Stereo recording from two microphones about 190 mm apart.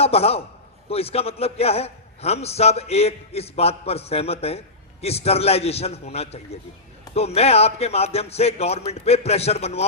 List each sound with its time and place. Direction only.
0.0 s a man's voice: 30° left (ahead or behind)